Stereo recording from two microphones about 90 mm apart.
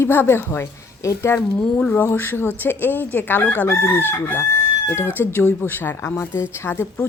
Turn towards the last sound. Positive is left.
turn(degrees=25)  # may be behind; listen again after turning